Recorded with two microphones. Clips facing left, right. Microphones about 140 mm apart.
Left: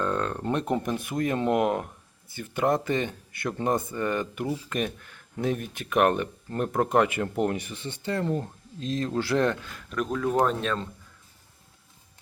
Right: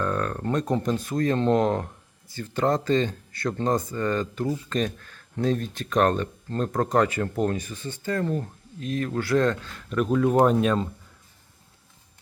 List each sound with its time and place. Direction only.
0.0 s a sound: 20° left (ahead or behind)
0.8 s speech: 20° left (ahead or behind)
9.7 s speech: centre (ahead or behind)